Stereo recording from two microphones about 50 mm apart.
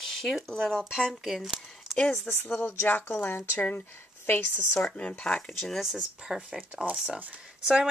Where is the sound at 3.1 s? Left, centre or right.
Left.